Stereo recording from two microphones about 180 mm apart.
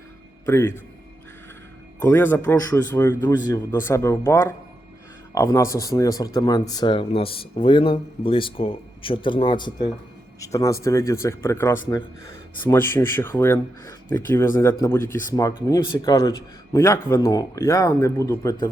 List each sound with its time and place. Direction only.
0.4 s a man's voice: 15° left (ahead or behind)
2.0 s speech: 10° left (ahead or behind)